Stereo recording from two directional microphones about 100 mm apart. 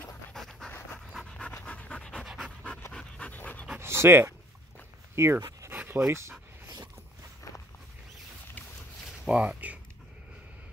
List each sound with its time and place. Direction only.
0.3 s pant: 5° left (ahead or behind)
2.2 s pant: 5° right (ahead or behind)
2.9 s pant: 10° left (ahead or behind)
3.8 s dog: 25° right (ahead or behind)
5.1 s speech: 25° right (ahead or behind)
9.2 s speech: 10° right (ahead or behind)